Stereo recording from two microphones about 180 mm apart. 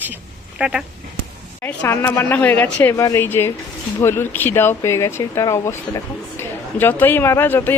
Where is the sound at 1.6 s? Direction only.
10° left (ahead or behind).